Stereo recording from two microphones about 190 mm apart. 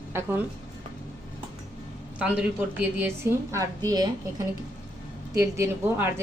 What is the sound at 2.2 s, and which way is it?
A woman's voice, 5° right (ahead or behind).